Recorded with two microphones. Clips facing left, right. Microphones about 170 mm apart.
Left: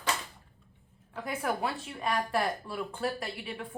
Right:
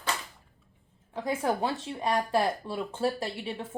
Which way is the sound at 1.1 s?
25° right (ahead or behind).